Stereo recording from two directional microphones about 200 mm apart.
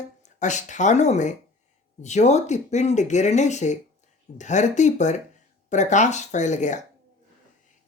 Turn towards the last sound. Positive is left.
turn(degrees=35)  # may be behind; listen again after turning